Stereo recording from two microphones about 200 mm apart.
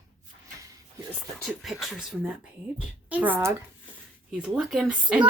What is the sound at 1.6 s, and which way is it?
A child's voice, centre (ahead or behind).